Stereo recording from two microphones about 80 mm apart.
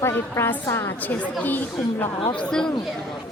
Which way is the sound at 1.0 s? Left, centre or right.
Left.